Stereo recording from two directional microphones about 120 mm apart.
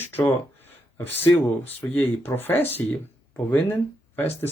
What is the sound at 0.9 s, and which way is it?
Speech, 20° left (ahead or behind).